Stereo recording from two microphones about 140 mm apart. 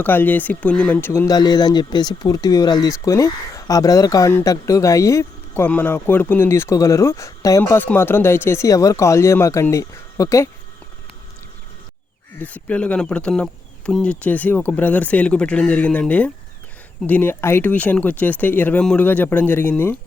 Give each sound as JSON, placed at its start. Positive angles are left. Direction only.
{"t": 0.0, "sound": "speech", "side_deg": 15}
{"t": 12.4, "sound": "speech", "side_deg": 10}